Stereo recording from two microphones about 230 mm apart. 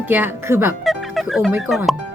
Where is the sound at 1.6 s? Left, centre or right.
Centre.